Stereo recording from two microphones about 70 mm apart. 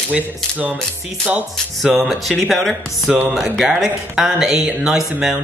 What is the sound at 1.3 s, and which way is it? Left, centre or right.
Speech, centre.